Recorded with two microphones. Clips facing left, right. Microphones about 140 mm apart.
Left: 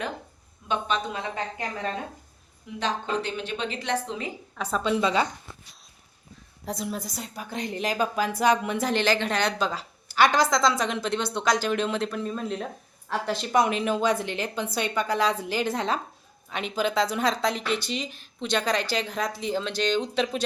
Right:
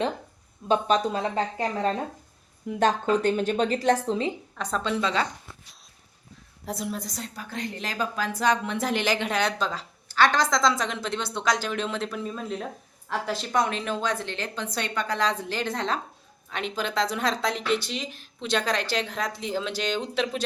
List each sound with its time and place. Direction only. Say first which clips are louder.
0.7 s a woman's voice: right 5 dB; 40° right (ahead or behind)
2.6 s a woman's voice: right 6 dB; 50° right (ahead or behind)
4.5 s a woman's voice: left 6 dB; 5° left (ahead or behind)
6.7 s a woman's voice: even; centre (ahead or behind)
8.9 s a woman's voice: left 2 dB; 10° right (ahead or behind)